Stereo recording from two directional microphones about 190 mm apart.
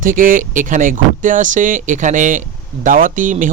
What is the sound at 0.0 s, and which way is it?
Speech, 45° right (ahead or behind).